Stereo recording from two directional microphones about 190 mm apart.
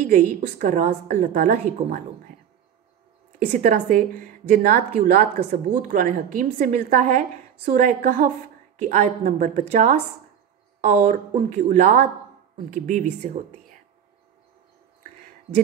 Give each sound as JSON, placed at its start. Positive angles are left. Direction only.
{"t": 0.0, "sound": "a woman's voice", "side_deg": -45}
{"t": 3.5, "sound": "a woman's voice", "side_deg": -45}